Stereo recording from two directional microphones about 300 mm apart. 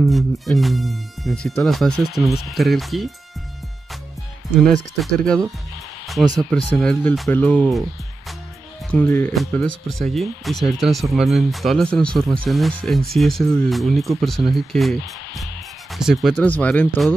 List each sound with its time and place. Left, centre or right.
0.0 s speech: centre
4.9 s speech: centre
6.5 s speech: centre
8.9 s speech: centre